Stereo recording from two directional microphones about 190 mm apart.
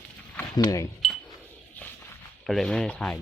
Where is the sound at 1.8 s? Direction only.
10° left (ahead or behind).